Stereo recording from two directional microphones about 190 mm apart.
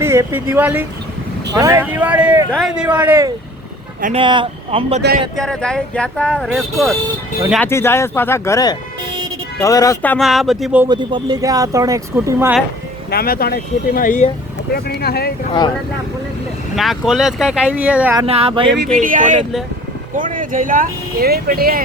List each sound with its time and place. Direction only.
0.0 s speech: 15° right (ahead or behind)
4.2 s speech: 25° right (ahead or behind)
5.4 s speech: 5° left (ahead or behind)
7.6 s speech: 15° left (ahead or behind); by 10.8 s 5° right (ahead or behind)
10.8 s speech: 20° right (ahead or behind)
13.1 s speech: 55° left (ahead or behind)
14.7 s speech: 55° left (ahead or behind)
16.7 s speech: centre (ahead or behind)
18.2 s speech: 30° right (ahead or behind)
18.9 s speech: 45° right (ahead or behind)